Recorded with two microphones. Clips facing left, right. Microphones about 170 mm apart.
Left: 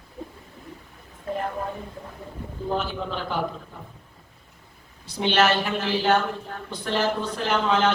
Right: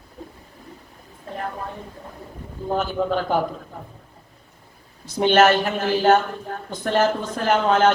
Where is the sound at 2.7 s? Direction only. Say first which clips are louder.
Right 7 dB; 45° right (ahead or behind).